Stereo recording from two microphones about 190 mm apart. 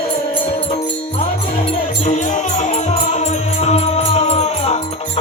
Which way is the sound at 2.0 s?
40° left (ahead or behind).